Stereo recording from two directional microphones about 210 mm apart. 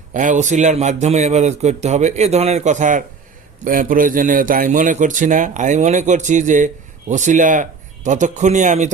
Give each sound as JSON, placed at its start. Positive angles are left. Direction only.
{"t": 0.1, "sound": "a man's voice", "side_deg": -35}